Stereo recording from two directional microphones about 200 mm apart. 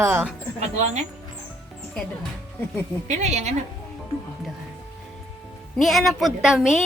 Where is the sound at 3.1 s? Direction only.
35° right (ahead or behind).